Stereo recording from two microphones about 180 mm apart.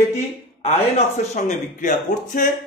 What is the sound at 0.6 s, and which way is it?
A man's voice, 35° left (ahead or behind).